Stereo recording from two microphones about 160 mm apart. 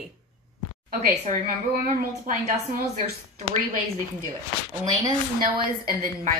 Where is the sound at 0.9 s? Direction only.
60° right (ahead or behind).